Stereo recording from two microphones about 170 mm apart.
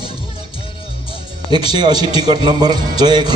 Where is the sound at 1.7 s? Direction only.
25° right (ahead or behind).